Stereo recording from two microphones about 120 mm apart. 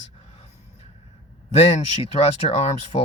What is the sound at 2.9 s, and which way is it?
Speech, 45° left (ahead or behind).